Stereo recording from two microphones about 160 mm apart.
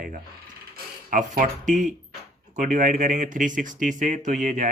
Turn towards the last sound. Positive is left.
turn(degrees=-50)  # may be behind; listen again after turning